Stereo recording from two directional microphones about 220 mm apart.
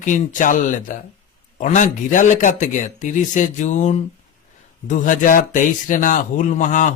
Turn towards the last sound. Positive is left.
turn(degrees=35)  # may be behind; listen again after turning